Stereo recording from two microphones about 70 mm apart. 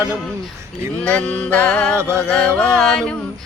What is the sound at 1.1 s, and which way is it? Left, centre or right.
Music, left.